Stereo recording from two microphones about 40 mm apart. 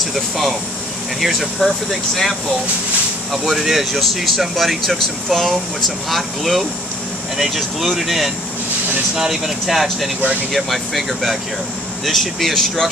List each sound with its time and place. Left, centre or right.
1.2 s speech: centre
9.1 s speech: centre
9.7 s speech: centre